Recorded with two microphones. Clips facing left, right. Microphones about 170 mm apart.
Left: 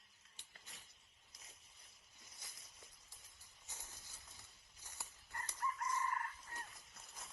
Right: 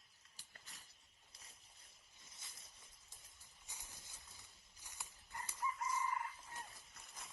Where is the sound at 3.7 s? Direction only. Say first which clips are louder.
Left 1 dB; 15° right (ahead or behind).